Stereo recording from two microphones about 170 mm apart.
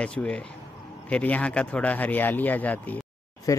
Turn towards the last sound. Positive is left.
turn(degrees=20)  # may be behind; listen again after turning